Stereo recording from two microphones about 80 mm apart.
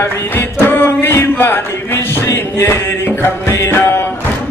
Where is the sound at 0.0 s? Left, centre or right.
Left.